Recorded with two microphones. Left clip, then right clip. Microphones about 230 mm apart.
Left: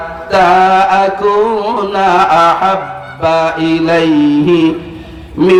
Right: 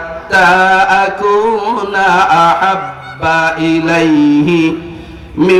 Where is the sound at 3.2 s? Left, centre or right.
Right.